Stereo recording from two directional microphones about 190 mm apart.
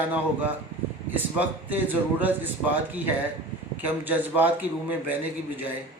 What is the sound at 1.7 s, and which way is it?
Speech, 10° right (ahead or behind).